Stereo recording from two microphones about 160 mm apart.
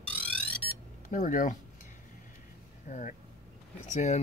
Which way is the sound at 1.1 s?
55° left (ahead or behind).